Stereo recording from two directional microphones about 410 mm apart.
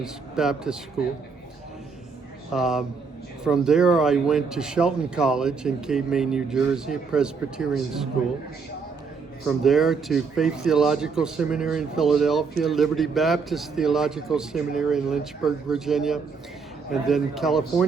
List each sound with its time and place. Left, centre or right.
0.0 s speech: centre
2.5 s speech: centre
9.5 s speech: centre